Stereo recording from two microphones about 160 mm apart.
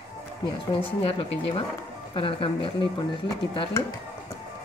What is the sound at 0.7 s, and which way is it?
Speech, 35° left (ahead or behind).